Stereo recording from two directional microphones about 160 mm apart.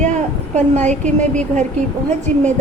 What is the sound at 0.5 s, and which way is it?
Speech, 45° right (ahead or behind).